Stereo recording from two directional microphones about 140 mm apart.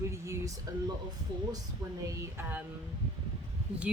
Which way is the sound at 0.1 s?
20° right (ahead or behind).